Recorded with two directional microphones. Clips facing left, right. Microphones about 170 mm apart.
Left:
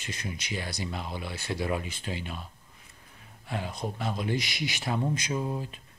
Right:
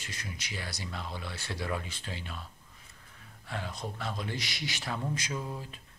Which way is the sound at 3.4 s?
15° left (ahead or behind).